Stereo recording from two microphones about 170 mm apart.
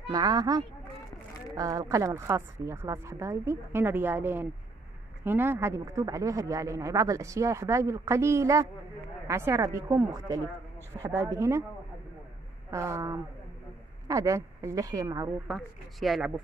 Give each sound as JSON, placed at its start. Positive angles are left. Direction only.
{"t": 0.1, "sound": "a woman's voice", "side_deg": -20}
{"t": 12.7, "sound": "a woman's voice", "side_deg": -15}
{"t": 15.4, "sound": "speech", "side_deg": 0}